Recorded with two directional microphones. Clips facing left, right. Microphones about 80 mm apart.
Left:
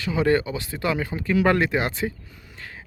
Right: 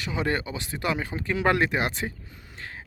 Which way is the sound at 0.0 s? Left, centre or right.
Right.